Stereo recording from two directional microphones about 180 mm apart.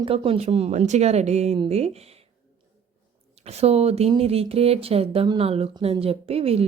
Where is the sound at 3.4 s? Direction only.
35° right (ahead or behind).